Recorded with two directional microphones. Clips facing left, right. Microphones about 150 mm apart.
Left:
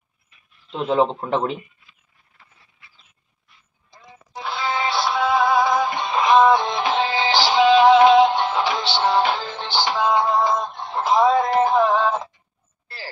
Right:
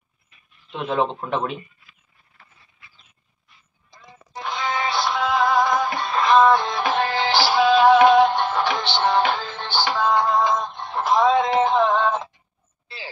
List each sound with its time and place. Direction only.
0.7 s speech: 30° left (ahead or behind)
4.3 s music: 5° left (ahead or behind)